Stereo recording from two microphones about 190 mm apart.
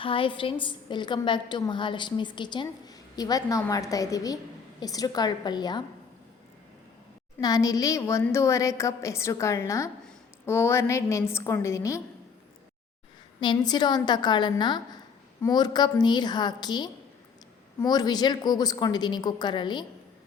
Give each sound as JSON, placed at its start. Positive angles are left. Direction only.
{"t": 0.0, "sound": "a woman's voice", "side_deg": 25}
{"t": 7.3, "sound": "a woman's voice", "side_deg": 20}
{"t": 13.4, "sound": "a woman's voice", "side_deg": 25}